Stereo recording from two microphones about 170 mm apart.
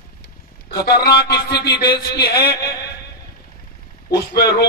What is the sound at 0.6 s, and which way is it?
A man's voice, 65° left (ahead or behind).